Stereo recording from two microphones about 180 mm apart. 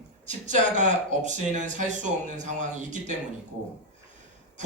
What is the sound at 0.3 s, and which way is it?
Speech, 45° right (ahead or behind).